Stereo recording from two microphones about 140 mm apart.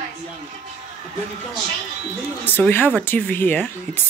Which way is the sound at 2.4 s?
15° left (ahead or behind).